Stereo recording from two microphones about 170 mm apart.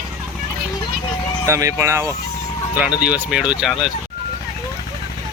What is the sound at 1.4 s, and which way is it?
Speech, 15° right (ahead or behind).